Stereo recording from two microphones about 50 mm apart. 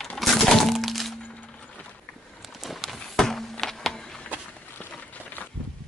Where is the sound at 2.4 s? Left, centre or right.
Centre.